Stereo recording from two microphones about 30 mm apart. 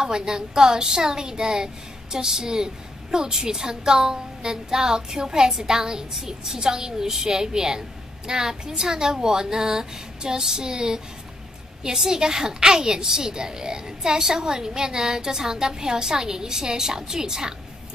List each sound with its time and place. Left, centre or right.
0.0 s a woman's voice: right